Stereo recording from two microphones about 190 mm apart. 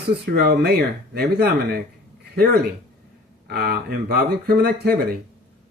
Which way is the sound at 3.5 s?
55° right (ahead or behind).